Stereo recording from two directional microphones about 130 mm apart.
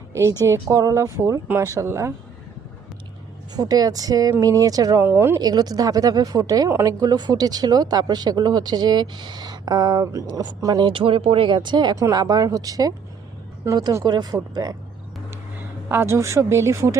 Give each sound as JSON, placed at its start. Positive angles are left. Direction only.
{"t": 0.1, "sound": "a woman's voice", "side_deg": -20}
{"t": 3.5, "sound": "speech", "side_deg": -30}
{"t": 5.0, "sound": "speech", "side_deg": -20}
{"t": 5.4, "sound": "speech", "side_deg": -30}
{"t": 15.9, "sound": "speech", "side_deg": -20}